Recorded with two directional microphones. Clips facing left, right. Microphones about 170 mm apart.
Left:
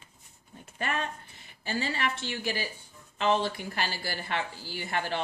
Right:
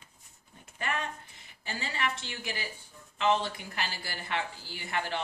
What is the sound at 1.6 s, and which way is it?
Speech, 35° left (ahead or behind).